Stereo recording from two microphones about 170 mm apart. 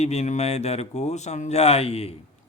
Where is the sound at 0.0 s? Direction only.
40° left (ahead or behind).